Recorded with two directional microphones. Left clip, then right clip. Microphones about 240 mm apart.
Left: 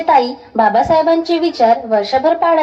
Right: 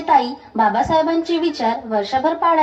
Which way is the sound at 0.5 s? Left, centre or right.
Right.